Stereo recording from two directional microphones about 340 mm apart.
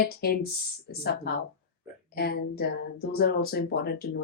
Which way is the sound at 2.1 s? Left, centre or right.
Left.